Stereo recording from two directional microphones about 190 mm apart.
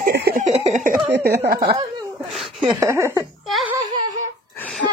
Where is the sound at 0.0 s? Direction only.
55° right (ahead or behind).